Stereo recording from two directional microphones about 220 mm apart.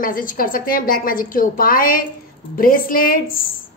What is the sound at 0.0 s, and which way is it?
A woman's voice, 40° left (ahead or behind).